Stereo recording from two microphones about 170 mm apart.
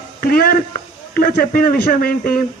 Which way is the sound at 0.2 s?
60° left (ahead or behind).